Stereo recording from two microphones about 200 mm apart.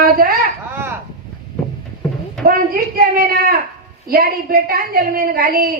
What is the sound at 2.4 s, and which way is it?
Speech, 45° right (ahead or behind).